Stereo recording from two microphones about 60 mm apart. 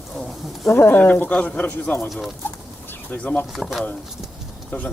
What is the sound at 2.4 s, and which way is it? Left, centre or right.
Bird, left.